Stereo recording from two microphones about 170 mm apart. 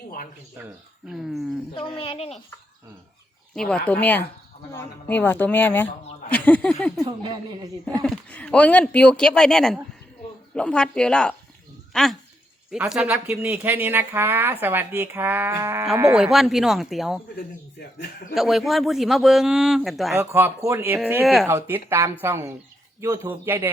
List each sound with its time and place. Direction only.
1.2 s speech: centre (ahead or behind)
1.7 s speech: 30° left (ahead or behind)
3.5 s speech: 5° left (ahead or behind)
7.0 s speech: 25° right (ahead or behind)
8.0 s speech: 5° left (ahead or behind); by 15.9 s 15° right (ahead or behind)
16.1 s speech: centre (ahead or behind)
18.3 s speech: centre (ahead or behind)
20.1 s speech: 15° right (ahead or behind)